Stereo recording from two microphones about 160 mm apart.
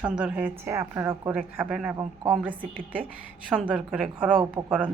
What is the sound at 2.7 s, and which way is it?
Speech, 60° right (ahead or behind).